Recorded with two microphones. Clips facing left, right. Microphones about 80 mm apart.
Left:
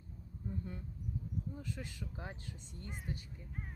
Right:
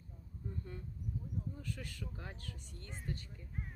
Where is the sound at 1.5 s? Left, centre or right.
Centre.